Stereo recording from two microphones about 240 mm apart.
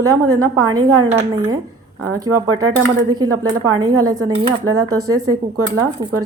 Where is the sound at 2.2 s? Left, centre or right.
Right.